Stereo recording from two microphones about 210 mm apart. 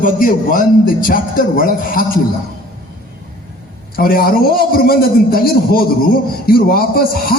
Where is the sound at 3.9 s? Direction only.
45° left (ahead or behind).